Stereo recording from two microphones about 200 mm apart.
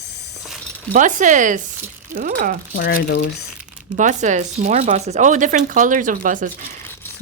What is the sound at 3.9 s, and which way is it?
Speech, 40° right (ahead or behind).